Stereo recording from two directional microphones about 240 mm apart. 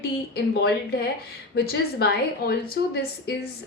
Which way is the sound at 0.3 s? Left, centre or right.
Left.